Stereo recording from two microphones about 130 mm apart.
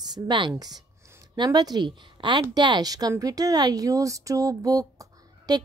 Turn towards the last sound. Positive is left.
turn(degrees=-30)  # may be behind; listen again after turning